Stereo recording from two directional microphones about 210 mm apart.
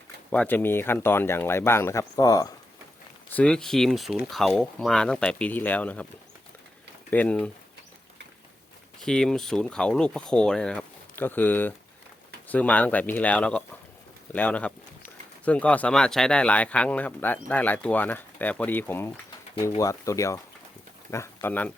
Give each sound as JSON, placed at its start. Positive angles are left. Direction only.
{"t": 0.3, "sound": "speech", "side_deg": 5}
{"t": 3.3, "sound": "speech", "side_deg": 5}
{"t": 7.1, "sound": "speech", "side_deg": 5}
{"t": 9.0, "sound": "speech", "side_deg": 5}